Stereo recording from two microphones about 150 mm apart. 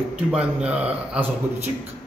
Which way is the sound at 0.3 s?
5° right (ahead or behind).